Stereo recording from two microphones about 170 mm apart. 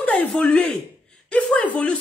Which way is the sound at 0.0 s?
5° left (ahead or behind).